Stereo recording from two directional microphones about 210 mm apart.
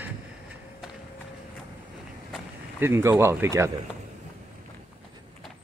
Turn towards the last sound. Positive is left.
turn(degrees=-15)  # may be behind; listen again after turning